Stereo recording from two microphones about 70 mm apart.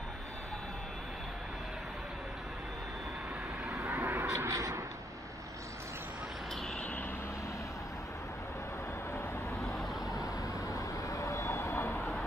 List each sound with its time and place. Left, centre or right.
3.9 s a sound: right
4.3 s speech: right
9.6 s vehicle: centre
10.2 s vehicle: left
12.0 s vehicle: centre